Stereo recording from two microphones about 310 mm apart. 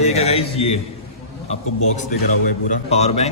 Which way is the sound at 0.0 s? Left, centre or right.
Centre.